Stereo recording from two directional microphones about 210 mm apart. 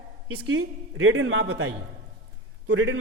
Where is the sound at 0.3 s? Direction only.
85° right.